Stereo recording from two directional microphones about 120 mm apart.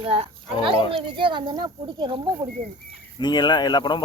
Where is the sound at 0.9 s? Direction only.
45° right (ahead or behind).